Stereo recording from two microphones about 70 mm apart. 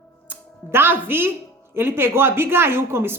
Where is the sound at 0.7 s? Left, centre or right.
Right.